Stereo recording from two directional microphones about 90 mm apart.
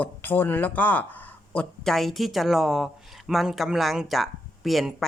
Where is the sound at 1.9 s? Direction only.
Centre (ahead or behind).